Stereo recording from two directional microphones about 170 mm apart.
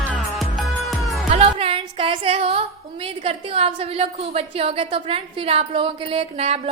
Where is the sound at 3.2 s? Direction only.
35° right (ahead or behind).